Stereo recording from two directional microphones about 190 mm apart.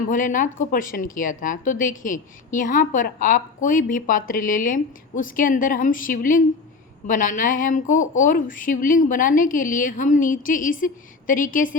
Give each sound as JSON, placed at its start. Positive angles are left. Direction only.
{"t": 0.1, "sound": "speech", "side_deg": 45}